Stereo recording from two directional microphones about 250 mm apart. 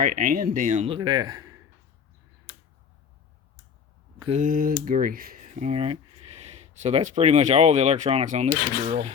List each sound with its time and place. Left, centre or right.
0.0 s speech: right; by 1.5 s centre
4.3 s speech: right